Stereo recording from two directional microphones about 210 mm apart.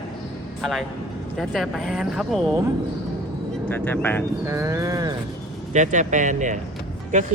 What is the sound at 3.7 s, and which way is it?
Speech, 10° left (ahead or behind).